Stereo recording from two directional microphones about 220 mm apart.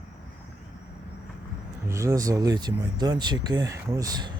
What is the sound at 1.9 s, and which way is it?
Speech, 15° right (ahead or behind).